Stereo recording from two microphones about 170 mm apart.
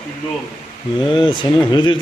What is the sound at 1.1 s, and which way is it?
Speech, 30° left (ahead or behind).